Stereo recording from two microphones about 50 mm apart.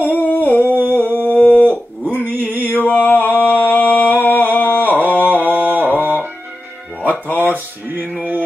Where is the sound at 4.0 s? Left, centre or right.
Left.